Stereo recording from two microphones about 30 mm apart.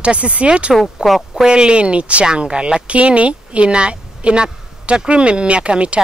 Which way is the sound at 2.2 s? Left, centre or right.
Right.